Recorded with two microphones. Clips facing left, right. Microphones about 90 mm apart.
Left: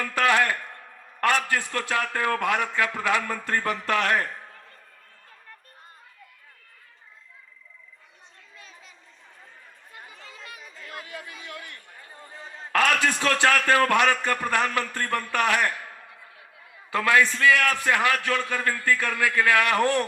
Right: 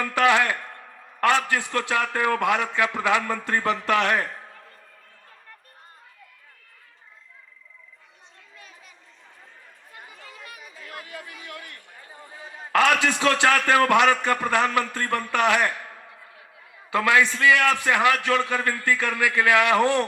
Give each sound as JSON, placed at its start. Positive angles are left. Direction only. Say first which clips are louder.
{"t": 0.0, "sound": "a man's voice", "louder": "right 2 dB", "side_deg": -20}
{"t": 8.5, "sound": "chatter", "louder": "even", "side_deg": 20}
{"t": 10.2, "sound": "chatter", "louder": "right 1 dB", "side_deg": 25}
{"t": 10.8, "sound": "a sound", "louder": "even", "side_deg": 20}
{"t": 12.1, "sound": "a man's voice", "louder": "right 1 dB", "side_deg": -15}
{"t": 16.9, "sound": "a man's voice", "louder": "right 1 dB", "side_deg": -15}